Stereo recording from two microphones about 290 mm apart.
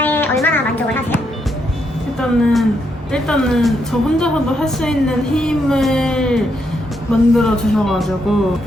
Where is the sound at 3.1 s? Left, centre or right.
Centre.